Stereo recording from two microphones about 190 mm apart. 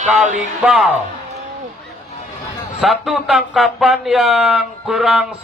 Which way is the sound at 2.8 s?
Centre (ahead or behind).